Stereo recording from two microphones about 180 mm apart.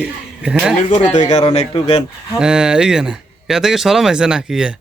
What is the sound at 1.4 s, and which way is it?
Speech, 30° left (ahead or behind).